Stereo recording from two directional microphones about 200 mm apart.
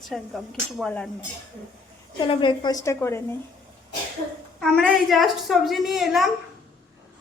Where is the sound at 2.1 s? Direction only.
25° left (ahead or behind).